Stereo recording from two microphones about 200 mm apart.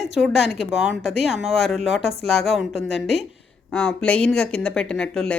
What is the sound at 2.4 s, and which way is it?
Speech, centre (ahead or behind).